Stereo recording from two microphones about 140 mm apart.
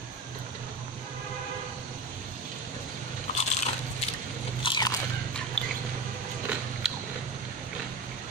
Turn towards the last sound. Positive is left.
turn(degrees=-5)  # may be behind; listen again after turning